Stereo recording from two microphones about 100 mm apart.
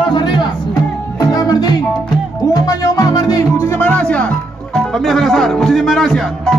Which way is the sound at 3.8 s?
15° left (ahead or behind).